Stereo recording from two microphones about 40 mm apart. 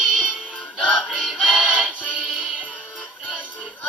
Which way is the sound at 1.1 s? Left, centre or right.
Centre.